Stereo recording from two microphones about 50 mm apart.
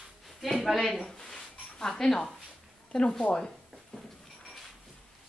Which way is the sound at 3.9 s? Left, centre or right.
Centre.